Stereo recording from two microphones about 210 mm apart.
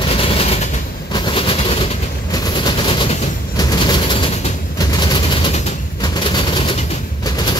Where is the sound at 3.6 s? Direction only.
20° left (ahead or behind).